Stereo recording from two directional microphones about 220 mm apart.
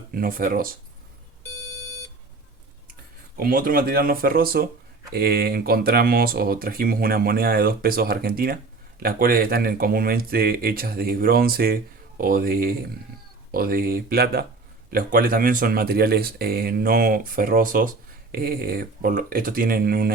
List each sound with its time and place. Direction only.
0.1 s speech: 40° right (ahead or behind)
1.5 s alarm clock: 10° left (ahead or behind)
3.3 s speech: 40° right (ahead or behind)